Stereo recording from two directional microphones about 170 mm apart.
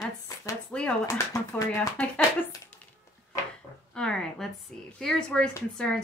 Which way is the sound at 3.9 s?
5° left (ahead or behind).